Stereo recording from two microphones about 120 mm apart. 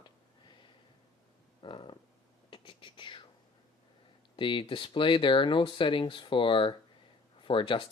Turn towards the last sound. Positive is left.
turn(degrees=45)  # may be behind; listen again after turning